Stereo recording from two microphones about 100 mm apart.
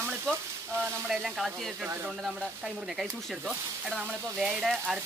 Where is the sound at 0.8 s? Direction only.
5° right (ahead or behind).